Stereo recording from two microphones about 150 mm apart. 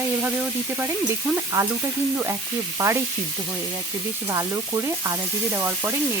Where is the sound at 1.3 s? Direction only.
20° right (ahead or behind).